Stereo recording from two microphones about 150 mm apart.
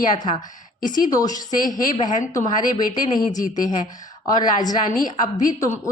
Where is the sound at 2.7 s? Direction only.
30° left (ahead or behind).